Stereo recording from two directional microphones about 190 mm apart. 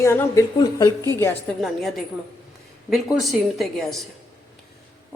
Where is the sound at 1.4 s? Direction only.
Centre (ahead or behind).